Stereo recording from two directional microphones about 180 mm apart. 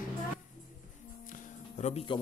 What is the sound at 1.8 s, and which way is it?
Speech, 40° left (ahead or behind).